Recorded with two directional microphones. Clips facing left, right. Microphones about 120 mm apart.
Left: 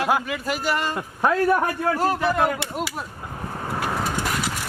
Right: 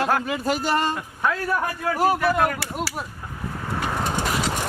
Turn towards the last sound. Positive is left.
turn(degrees=5)  # may be behind; listen again after turning